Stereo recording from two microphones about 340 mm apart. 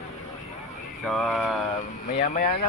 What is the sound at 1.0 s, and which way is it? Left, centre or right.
Speech, centre.